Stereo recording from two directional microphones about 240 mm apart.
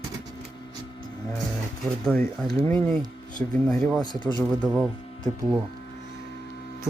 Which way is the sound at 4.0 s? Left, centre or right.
Centre.